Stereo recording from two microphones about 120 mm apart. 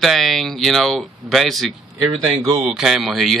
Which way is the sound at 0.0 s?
Centre (ahead or behind).